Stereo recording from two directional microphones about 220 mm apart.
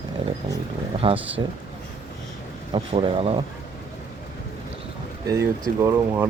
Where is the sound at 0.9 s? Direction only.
25° right (ahead or behind).